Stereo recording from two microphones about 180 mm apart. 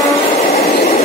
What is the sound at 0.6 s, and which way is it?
Train, 35° left (ahead or behind).